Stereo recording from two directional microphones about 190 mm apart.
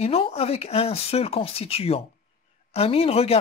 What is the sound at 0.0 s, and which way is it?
Speech, 30° left (ahead or behind).